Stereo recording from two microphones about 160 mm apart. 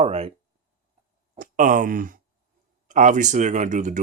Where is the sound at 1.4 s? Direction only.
55° right (ahead or behind).